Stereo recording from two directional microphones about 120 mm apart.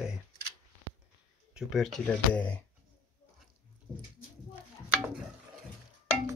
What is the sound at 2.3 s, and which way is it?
Speech, 10° left (ahead or behind).